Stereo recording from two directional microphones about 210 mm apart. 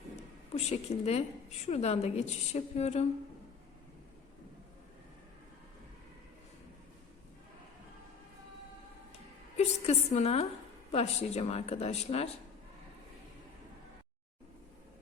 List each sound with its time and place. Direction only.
0.5 s a woman's voice: 30° left (ahead or behind)
9.6 s speech: 30° left (ahead or behind)